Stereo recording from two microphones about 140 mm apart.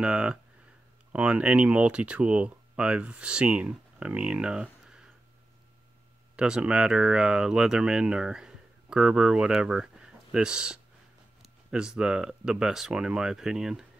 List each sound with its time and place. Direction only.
0.0 s speech: 10° right (ahead or behind)
6.3 s speech: 5° right (ahead or behind)